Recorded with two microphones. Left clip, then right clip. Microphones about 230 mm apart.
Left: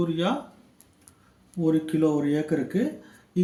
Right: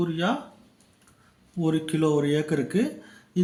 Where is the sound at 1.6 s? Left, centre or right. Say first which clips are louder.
Left 2 dB; centre.